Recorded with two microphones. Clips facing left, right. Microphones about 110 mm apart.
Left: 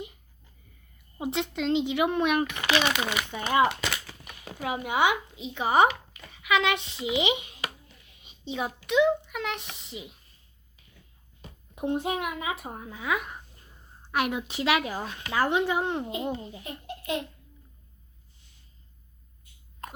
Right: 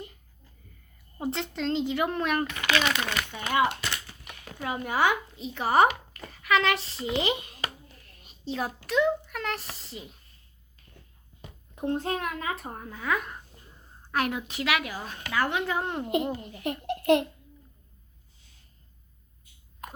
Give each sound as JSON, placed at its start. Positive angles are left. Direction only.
{"t": 1.2, "sound": "a woman's voice", "side_deg": 5}
{"t": 3.3, "sound": "a woman's voice", "side_deg": 25}
{"t": 4.4, "sound": "speech", "side_deg": 10}
{"t": 6.3, "sound": "a sound", "side_deg": 0}
{"t": 8.9, "sound": "a woman's voice", "side_deg": 0}
{"t": 11.7, "sound": "a woman's voice", "side_deg": 15}
{"t": 15.8, "sound": "a woman's voice", "side_deg": 5}
{"t": 16.2, "sound": "a woman's voice", "side_deg": 25}
{"t": 16.6, "sound": "a child's voice", "side_deg": -70}
{"t": 19.8, "sound": "a sound", "side_deg": -5}